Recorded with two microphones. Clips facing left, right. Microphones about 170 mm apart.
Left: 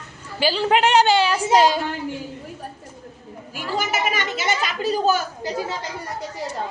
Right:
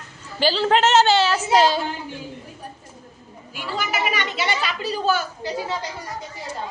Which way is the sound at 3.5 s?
45° left (ahead or behind).